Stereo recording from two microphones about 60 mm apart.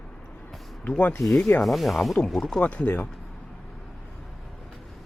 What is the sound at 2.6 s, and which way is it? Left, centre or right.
Speech, left.